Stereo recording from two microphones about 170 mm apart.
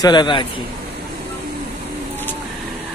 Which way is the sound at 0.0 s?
25° left (ahead or behind).